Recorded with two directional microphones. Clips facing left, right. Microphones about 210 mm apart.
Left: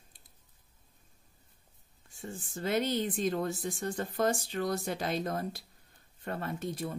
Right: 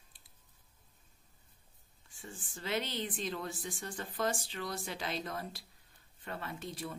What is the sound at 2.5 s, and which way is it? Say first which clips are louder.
Speech: left 7 dB; 45° left (ahead or behind).